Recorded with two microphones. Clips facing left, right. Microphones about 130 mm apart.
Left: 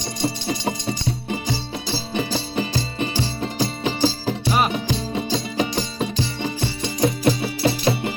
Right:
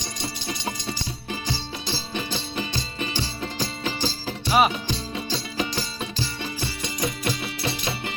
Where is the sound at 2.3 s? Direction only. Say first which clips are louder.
Left 6 dB; 25° left (ahead or behind).